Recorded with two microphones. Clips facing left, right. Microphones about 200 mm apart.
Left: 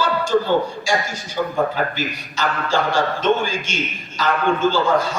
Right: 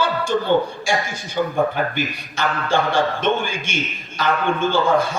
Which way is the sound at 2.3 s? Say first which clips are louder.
Right 1 dB; 55° right (ahead or behind).